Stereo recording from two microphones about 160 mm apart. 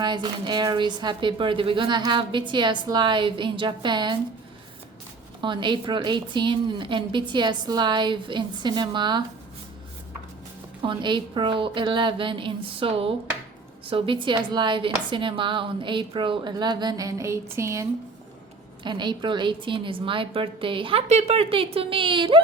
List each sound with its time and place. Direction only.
0.0 s a woman's voice: 30° right (ahead or behind)
5.4 s a woman's voice: 30° right (ahead or behind)
10.8 s a woman's voice: 30° right (ahead or behind)
18.8 s a woman's voice: 30° right (ahead or behind)